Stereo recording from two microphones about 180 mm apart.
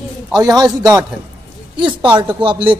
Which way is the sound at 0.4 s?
20° right (ahead or behind).